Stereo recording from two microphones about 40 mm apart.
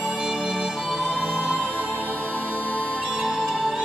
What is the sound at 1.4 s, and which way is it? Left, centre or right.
Music, right.